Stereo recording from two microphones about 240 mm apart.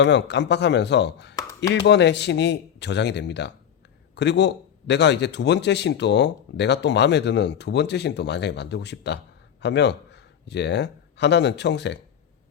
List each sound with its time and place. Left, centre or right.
0.0 s a man's voice: left
1.4 s a sound: centre
1.7 s a man's voice: left